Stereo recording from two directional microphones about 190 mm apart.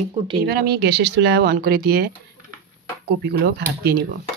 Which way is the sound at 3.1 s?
60° right (ahead or behind).